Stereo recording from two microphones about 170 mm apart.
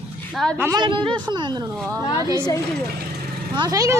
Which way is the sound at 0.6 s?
20° right (ahead or behind).